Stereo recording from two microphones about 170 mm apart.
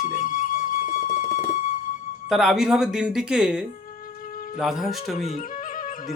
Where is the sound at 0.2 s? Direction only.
55° left (ahead or behind).